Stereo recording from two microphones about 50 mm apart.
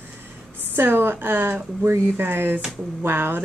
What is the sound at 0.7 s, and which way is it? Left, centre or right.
Speech, right.